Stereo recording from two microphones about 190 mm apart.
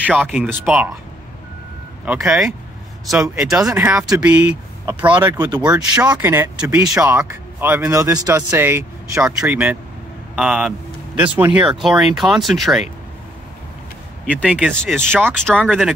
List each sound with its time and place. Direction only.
0.2 s speech: 5° right (ahead or behind)
2.0 s speech: 5° right (ahead or behind)
14.4 s speech: 5° right (ahead or behind)
15.0 s speech: 10° right (ahead or behind)
15.3 s speech: 5° left (ahead or behind)